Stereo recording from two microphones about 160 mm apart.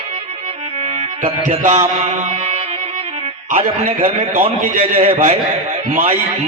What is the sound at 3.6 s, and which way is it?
A man's voice, 35° right (ahead or behind).